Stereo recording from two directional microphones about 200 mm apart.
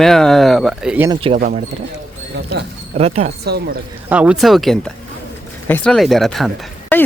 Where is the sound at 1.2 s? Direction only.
30° right (ahead or behind).